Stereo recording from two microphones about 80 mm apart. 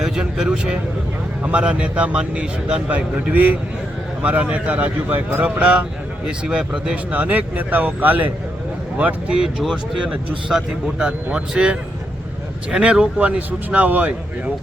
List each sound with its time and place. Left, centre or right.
0.0 s a man's voice: centre